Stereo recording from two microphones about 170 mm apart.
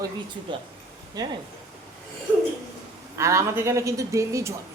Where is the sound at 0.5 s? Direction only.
30° right (ahead or behind).